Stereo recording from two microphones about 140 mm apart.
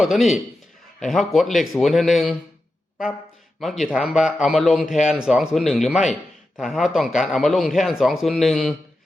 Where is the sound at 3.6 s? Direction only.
Centre (ahead or behind).